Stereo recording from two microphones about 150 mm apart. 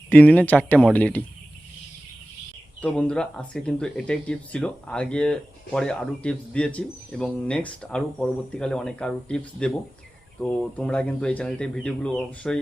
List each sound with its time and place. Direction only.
0.1 s speech: 10° left (ahead or behind)
2.8 s speech: 10° left (ahead or behind)